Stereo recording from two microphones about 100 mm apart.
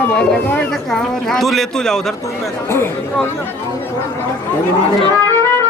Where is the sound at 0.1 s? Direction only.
15° left (ahead or behind).